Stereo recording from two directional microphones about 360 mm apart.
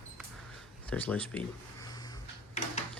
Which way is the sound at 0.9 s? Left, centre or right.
Centre.